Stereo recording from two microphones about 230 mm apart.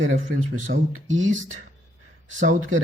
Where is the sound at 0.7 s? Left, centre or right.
Right.